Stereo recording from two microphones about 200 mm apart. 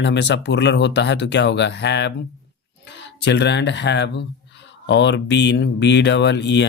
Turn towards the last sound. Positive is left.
turn(degrees=60)  # may be behind; listen again after turning